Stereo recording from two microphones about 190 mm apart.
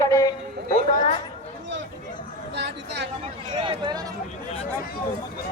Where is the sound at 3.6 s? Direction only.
25° right (ahead or behind).